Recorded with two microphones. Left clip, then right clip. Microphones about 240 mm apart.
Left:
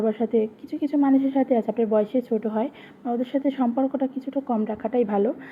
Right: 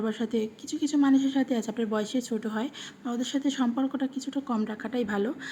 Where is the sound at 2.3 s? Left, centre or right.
Centre.